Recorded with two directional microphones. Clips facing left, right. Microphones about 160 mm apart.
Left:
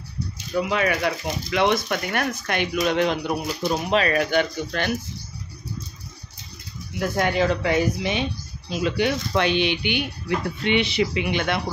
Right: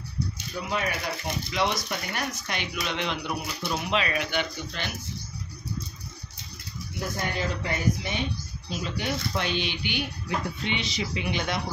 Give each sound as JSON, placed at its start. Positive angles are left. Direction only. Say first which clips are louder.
{"t": 0.6, "sound": "speech", "louder": "left 8 dB", "side_deg": 90}
{"t": 7.0, "sound": "speech", "louder": "left 9 dB", "side_deg": 90}